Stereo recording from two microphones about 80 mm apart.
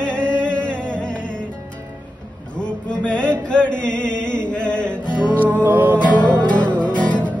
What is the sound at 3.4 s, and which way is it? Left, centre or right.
Chant, centre.